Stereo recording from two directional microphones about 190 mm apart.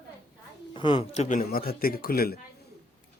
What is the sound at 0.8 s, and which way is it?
Speech, 25° left (ahead or behind).